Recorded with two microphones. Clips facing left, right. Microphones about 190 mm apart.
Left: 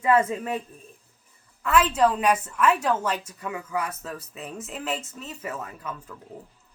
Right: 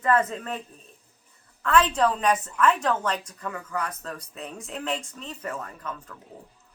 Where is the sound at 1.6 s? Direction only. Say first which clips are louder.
Left 1 dB; 10° left (ahead or behind).